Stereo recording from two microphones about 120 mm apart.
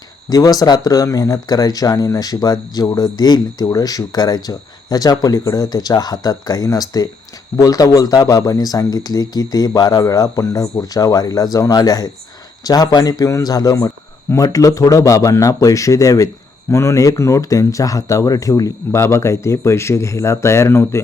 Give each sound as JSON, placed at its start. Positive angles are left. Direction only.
{"t": 0.3, "sound": "a man's voice", "side_deg": 30}